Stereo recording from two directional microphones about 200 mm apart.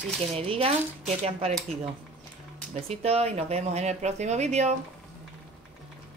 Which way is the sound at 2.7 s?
30° right (ahead or behind).